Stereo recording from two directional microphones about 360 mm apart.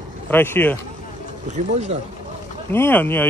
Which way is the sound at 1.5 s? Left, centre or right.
Centre.